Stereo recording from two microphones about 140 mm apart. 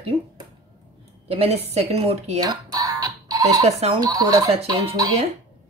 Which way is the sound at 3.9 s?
25° right (ahead or behind).